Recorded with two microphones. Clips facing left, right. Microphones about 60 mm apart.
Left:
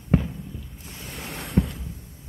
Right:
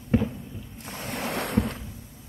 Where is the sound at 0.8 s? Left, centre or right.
Right.